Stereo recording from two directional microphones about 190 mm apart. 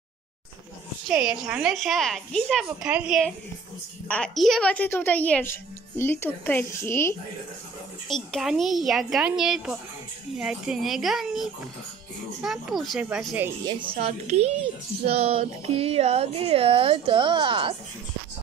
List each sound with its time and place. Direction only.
1.0 s a woman's voice: 5° right (ahead or behind); by 7.2 s 15° left (ahead or behind)
8.1 s a woman's voice: centre (ahead or behind)
13.7 s a child's voice: 25° right (ahead or behind)